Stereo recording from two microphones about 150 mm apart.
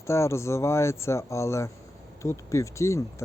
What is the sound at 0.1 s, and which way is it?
Speech, 20° left (ahead or behind).